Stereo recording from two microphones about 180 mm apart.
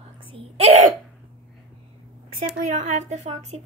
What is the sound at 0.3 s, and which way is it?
Speech, 35° right (ahead or behind).